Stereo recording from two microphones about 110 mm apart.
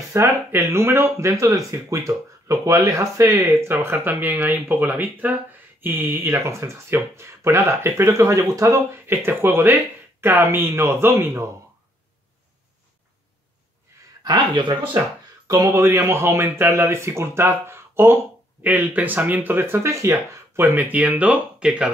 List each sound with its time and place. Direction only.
0.1 s speech: 25° right (ahead or behind)
14.2 s speech: 45° right (ahead or behind)
15.4 s speech: 30° right (ahead or behind); by 21.9 s 5° right (ahead or behind)